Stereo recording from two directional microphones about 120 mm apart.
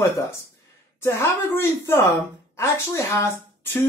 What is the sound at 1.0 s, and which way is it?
A woman's voice, 20° left (ahead or behind).